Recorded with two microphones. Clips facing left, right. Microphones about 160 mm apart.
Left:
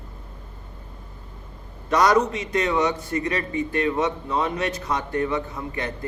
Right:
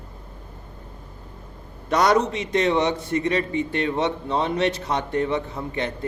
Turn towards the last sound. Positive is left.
turn(degrees=-25)  # may be behind; listen again after turning